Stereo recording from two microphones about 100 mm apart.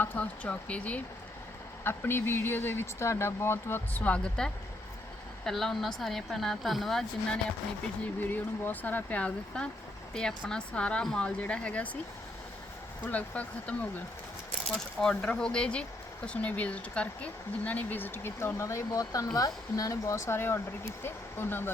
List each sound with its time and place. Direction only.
0.0 s speech: 15° left (ahead or behind)
8.2 s speech: 20° left (ahead or behind)
13.1 s speech: 15° left (ahead or behind)